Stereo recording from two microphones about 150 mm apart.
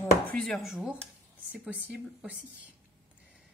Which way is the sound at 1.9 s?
10° right (ahead or behind).